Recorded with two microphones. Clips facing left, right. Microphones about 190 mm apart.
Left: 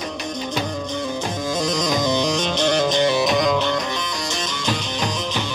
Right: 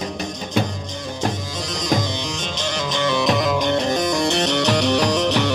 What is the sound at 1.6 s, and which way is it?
Music, 45° left (ahead or behind).